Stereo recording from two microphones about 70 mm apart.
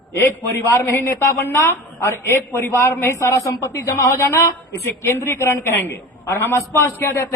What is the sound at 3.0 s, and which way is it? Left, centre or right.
A woman's voice, left.